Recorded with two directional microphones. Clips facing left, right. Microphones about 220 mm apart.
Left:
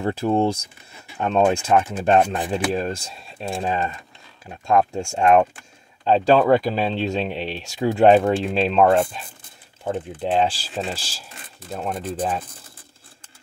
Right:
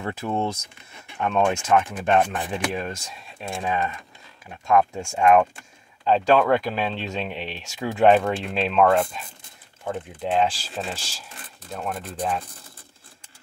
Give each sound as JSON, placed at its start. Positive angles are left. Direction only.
{"t": 0.0, "sound": "speech", "side_deg": 30}
{"t": 9.8, "sound": "speech", "side_deg": 30}